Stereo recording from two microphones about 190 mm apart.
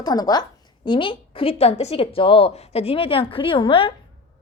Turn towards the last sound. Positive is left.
turn(degrees=25)  # may be behind; listen again after turning